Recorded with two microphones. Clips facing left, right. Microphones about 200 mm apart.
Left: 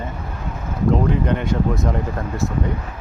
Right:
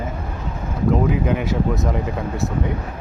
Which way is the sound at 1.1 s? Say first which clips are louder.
Even; 5° right (ahead or behind).